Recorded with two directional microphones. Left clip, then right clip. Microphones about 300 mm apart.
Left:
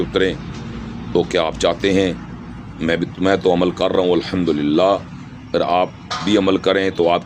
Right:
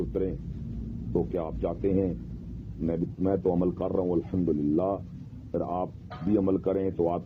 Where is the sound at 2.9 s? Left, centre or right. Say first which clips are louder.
Left 12 dB; left.